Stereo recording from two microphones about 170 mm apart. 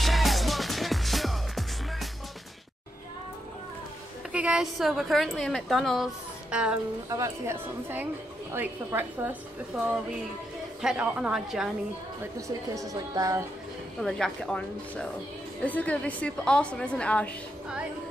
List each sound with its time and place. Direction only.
0.0 s music: centre (ahead or behind)
4.3 s a woman's voice: 5° right (ahead or behind)
7.1 s a woman's voice: 15° right (ahead or behind)
9.7 s a woman's voice: centre (ahead or behind)
12.4 s speech: 20° right (ahead or behind)
14.0 s a woman's voice: centre (ahead or behind)